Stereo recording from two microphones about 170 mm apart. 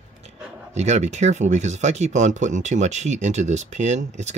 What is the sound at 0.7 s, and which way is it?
Speech, 40° right (ahead or behind).